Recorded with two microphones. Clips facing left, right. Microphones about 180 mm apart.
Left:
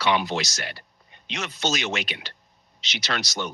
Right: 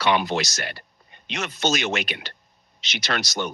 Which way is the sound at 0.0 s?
55° right (ahead or behind).